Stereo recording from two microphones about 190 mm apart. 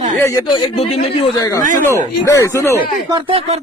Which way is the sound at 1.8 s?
15° left (ahead or behind).